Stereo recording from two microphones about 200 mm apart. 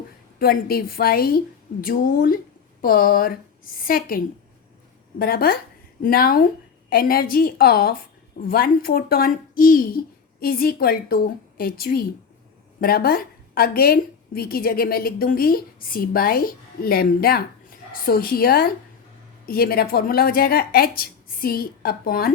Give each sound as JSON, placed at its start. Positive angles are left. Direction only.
{"t": 0.3, "sound": "a woman's voice", "side_deg": 50}
{"t": 5.2, "sound": "a woman's voice", "side_deg": 45}